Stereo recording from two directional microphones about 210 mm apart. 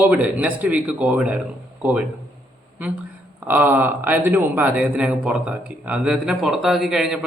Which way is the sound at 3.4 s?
10° right (ahead or behind).